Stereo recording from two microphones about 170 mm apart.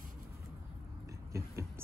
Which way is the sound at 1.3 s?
15° right (ahead or behind).